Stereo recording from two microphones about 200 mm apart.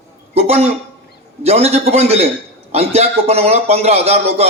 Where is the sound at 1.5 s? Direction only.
30° right (ahead or behind).